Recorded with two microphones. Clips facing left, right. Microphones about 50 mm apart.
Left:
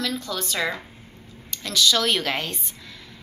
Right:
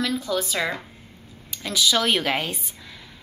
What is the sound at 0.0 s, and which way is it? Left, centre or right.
A woman's voice, centre.